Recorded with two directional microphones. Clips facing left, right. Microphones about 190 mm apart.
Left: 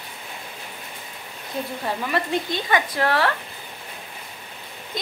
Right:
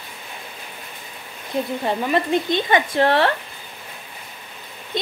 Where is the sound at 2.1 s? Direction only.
20° right (ahead or behind).